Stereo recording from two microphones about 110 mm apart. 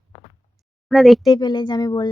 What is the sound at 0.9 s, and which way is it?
Speech, centre (ahead or behind).